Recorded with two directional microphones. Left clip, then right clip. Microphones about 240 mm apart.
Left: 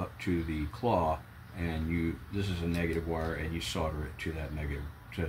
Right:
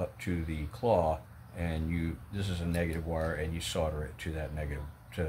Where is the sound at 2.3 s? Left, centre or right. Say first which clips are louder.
Right 3 dB; right.